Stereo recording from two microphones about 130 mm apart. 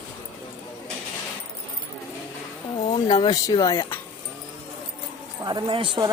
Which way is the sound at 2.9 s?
35° left (ahead or behind).